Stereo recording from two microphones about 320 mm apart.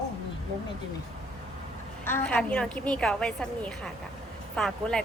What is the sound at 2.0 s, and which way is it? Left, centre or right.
A woman's voice, centre.